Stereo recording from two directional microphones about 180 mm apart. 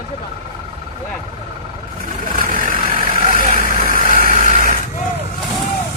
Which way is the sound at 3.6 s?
50° right (ahead or behind).